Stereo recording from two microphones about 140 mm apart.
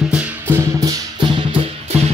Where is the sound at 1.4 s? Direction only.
35° right (ahead or behind).